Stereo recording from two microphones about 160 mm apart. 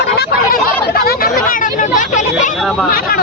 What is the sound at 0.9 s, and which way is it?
Chatter, 70° left (ahead or behind).